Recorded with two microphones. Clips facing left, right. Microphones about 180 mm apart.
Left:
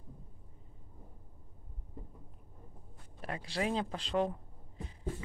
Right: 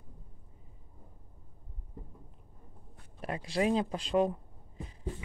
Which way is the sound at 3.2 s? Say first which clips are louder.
Right 4 dB; 25° right (ahead or behind).